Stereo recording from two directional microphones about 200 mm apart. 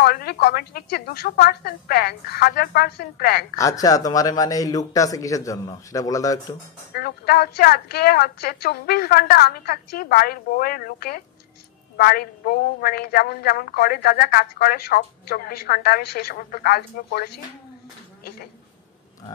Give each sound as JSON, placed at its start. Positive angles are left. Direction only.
{"t": 0.0, "sound": "a woman's voice", "side_deg": 50}
{"t": 3.5, "sound": "a man's voice", "side_deg": 15}
{"t": 6.9, "sound": "a woman's voice", "side_deg": 50}